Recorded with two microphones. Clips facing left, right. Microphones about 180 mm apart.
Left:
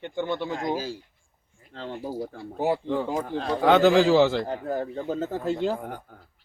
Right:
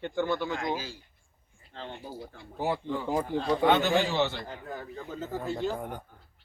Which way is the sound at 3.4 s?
90° left.